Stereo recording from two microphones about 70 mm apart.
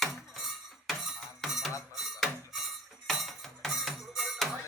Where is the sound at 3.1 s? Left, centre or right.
Centre.